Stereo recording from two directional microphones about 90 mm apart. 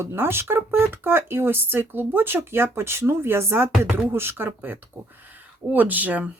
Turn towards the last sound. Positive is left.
turn(degrees=-20)  # may be behind; listen again after turning